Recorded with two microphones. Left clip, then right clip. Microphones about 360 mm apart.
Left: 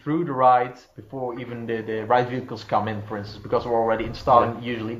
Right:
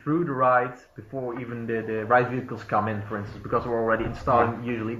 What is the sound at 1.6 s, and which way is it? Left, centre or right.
Speech, left.